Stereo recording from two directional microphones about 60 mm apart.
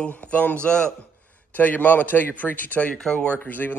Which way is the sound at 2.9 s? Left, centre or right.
Centre.